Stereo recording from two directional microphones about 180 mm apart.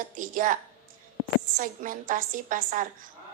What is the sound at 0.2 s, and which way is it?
Speech, 50° right (ahead or behind).